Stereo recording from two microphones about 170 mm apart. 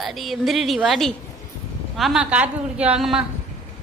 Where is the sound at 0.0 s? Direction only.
Centre (ahead or behind).